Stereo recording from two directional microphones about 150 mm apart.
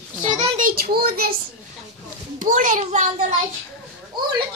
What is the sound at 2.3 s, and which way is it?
Speech, 60° right (ahead or behind).